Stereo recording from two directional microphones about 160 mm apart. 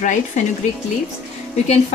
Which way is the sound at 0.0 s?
50° left (ahead or behind).